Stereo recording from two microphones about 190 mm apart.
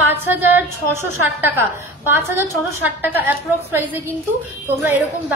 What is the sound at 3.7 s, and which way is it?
Speech, 10° right (ahead or behind).